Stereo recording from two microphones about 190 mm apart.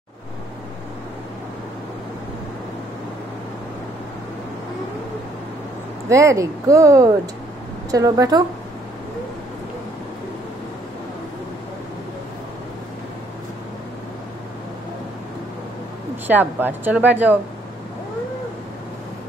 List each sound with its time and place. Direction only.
6.0 s a woman's voice: 15° right (ahead or behind)
16.3 s speech: 10° right (ahead or behind)